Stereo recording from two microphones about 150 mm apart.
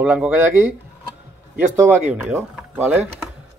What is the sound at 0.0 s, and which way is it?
Speech, 10° right (ahead or behind).